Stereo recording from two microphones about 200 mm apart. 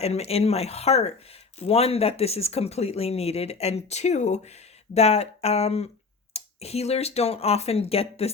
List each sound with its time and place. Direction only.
0.0 s speech: 30° left (ahead or behind)